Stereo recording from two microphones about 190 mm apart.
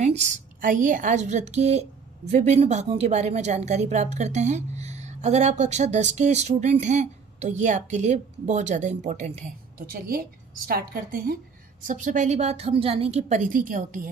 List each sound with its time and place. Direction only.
0.0 s a woman's voice: 35° right (ahead or behind)
9.8 s a woman's voice: 50° right (ahead or behind)